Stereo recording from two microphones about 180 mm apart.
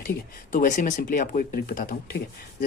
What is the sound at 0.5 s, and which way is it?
A man's voice, 45° left (ahead or behind).